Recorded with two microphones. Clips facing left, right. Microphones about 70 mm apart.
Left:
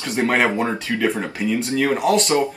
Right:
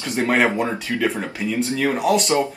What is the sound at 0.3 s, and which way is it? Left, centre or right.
Speech, centre.